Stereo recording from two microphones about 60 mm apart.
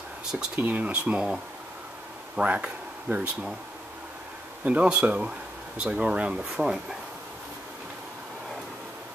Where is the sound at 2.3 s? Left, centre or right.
Right.